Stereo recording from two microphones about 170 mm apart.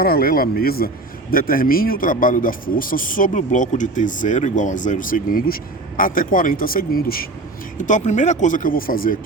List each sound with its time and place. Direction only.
0.0 s speech: 60° left (ahead or behind)
7.8 s speech: 45° left (ahead or behind)